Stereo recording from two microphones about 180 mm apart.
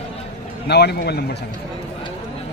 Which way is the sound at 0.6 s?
65° left (ahead or behind).